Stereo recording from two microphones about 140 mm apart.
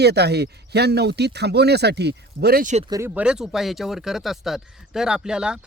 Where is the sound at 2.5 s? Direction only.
80° right.